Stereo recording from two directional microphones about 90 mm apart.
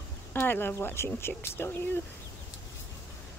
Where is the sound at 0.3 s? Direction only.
25° left (ahead or behind).